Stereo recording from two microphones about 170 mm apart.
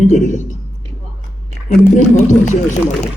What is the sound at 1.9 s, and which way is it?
Speech, 45° left (ahead or behind).